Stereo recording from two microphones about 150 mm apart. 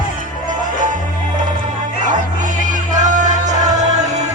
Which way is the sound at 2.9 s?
55° right (ahead or behind).